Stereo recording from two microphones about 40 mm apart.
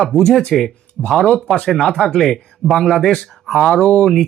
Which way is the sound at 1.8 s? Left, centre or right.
Centre.